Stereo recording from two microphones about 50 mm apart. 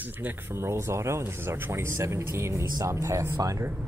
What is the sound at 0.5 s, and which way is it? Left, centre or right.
Speech, right.